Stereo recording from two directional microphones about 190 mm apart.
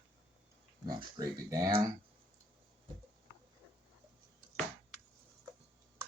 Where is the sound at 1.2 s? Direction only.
20° right (ahead or behind).